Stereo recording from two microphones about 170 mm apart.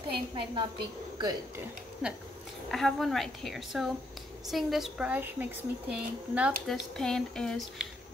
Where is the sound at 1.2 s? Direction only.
25° right (ahead or behind).